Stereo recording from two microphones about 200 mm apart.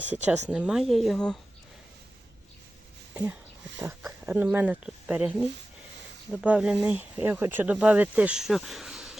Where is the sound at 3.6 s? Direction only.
65° right (ahead or behind).